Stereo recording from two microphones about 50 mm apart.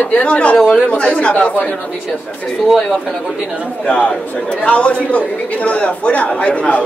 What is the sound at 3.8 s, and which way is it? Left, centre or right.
A man's voice, left.